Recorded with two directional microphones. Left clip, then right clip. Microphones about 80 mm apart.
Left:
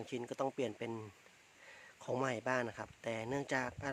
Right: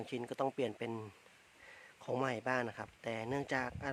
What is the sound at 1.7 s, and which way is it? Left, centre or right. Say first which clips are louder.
Speech: right 1 dB; centre.